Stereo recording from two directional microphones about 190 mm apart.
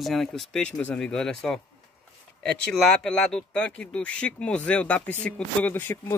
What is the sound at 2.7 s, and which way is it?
Speech, 5° left (ahead or behind).